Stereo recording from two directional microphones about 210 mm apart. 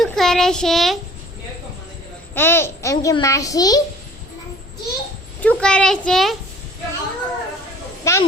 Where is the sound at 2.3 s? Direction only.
10° left (ahead or behind).